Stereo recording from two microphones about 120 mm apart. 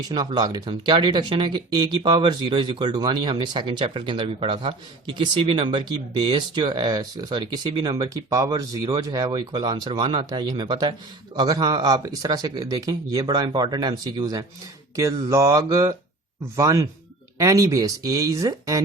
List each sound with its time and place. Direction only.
0.1 s speech: 35° right (ahead or behind)